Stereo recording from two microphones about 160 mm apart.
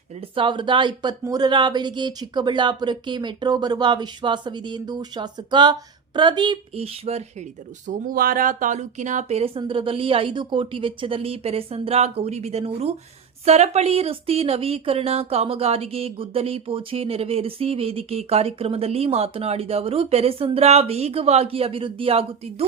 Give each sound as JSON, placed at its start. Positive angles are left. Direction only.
{"t": 0.2, "sound": "speech", "side_deg": -30}
{"t": 7.9, "sound": "speech", "side_deg": -55}
{"t": 9.6, "sound": "speech", "side_deg": -35}